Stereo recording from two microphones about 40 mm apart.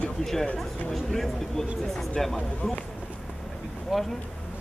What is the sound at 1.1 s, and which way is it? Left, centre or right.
Speech, centre.